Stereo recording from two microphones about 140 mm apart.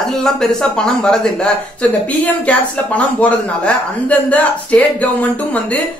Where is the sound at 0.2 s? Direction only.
5° left (ahead or behind).